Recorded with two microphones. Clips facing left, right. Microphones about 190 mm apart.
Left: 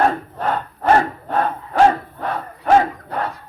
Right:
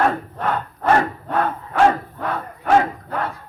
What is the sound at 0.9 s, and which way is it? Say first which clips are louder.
Battle cry: left 2 dB; 35° left (ahead or behind).